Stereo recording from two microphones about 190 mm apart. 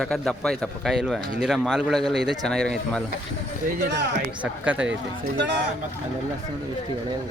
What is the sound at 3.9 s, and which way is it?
Speech, 70° right (ahead or behind).